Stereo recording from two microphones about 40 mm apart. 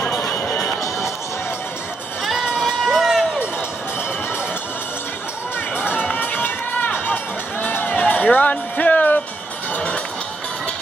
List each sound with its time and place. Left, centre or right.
0.4 s music: left
2.6 s crowd: centre
6.1 s run: left
7.8 s music: left